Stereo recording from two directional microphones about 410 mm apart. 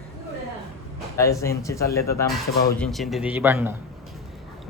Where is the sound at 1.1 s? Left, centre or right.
Centre.